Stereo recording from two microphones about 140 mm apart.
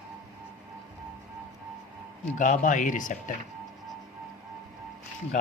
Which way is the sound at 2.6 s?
65° left (ahead or behind).